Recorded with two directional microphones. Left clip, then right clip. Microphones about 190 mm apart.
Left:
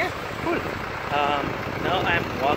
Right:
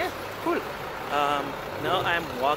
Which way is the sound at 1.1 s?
10° right (ahead or behind).